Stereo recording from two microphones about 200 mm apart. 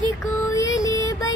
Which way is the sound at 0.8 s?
15° left (ahead or behind).